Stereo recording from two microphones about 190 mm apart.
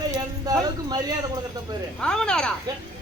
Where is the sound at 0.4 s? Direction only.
20° right (ahead or behind).